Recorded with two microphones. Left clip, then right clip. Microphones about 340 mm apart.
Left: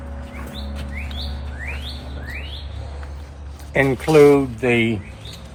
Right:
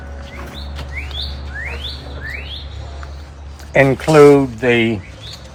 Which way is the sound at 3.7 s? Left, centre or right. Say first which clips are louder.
Right 4 dB; right.